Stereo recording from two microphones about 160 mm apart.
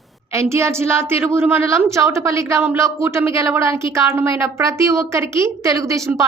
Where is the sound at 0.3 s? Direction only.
15° right (ahead or behind).